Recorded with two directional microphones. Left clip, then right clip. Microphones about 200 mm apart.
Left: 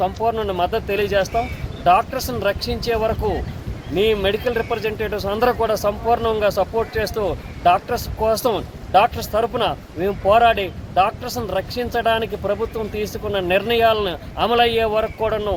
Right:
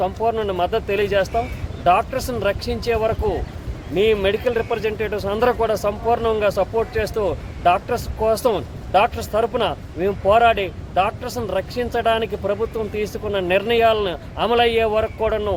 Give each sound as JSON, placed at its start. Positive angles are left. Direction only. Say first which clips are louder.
{"t": 0.0, "sound": "speech", "louder": "even", "side_deg": -15}